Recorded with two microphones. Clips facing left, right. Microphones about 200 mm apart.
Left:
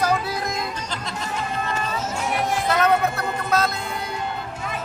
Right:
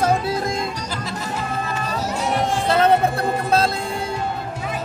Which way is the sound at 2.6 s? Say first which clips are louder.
Right 4 dB; 30° right (ahead or behind).